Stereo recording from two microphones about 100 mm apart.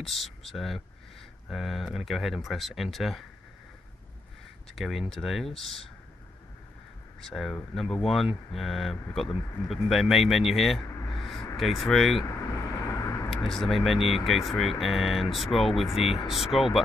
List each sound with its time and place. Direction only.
0.0 s speech: centre (ahead or behind)
4.7 s speech: centre (ahead or behind)
7.2 s speech: 5° left (ahead or behind)
12.3 s vehicle: 30° left (ahead or behind)
13.5 s speech: centre (ahead or behind)